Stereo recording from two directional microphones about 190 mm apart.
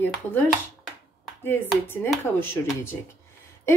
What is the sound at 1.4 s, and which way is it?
Speech, 10° left (ahead or behind).